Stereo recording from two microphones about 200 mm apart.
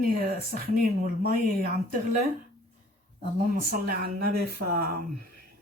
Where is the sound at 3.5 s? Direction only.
45° right (ahead or behind).